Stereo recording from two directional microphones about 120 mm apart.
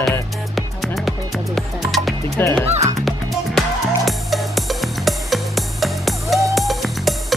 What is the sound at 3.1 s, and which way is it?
Music, centre (ahead or behind).